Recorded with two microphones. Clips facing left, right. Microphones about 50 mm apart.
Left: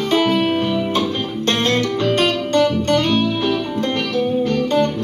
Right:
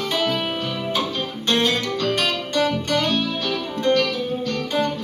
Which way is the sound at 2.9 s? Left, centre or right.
Left.